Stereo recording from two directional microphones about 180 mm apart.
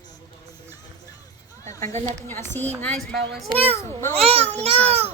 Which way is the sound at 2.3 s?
10° left (ahead or behind).